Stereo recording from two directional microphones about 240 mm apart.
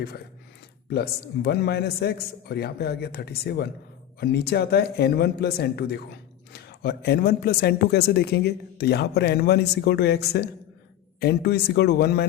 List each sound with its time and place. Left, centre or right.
0.9 s speech: left